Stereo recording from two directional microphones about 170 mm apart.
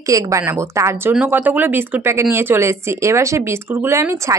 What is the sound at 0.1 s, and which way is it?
Speech, 15° right (ahead or behind).